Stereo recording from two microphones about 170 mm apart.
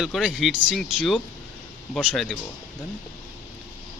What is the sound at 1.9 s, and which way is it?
Speech, 5° left (ahead or behind).